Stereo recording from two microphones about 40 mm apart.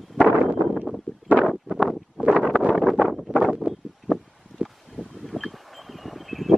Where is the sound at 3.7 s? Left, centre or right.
Right.